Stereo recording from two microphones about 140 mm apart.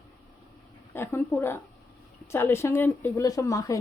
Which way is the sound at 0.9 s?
15° left (ahead or behind).